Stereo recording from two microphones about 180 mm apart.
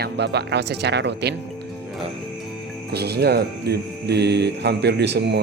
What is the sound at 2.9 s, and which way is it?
Speech, 65° right (ahead or behind).